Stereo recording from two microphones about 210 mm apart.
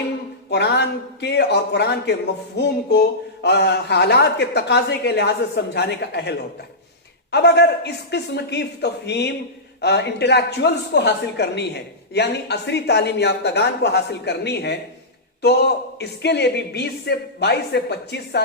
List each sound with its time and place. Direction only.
0.5 s speech: 55° left (ahead or behind)